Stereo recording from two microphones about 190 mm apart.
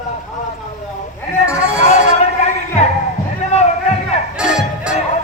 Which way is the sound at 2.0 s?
35° left (ahead or behind).